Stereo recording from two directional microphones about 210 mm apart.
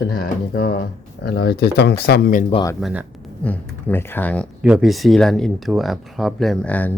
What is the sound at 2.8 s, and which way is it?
Speech, 5° right (ahead or behind).